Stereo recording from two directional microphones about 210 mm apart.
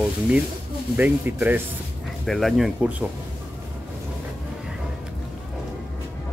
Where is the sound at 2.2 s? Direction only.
Centre (ahead or behind).